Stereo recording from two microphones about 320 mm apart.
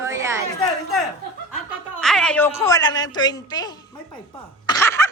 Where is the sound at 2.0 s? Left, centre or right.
Centre.